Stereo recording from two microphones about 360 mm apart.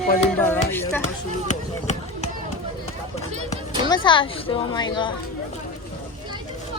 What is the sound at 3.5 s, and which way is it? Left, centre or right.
Speech, centre.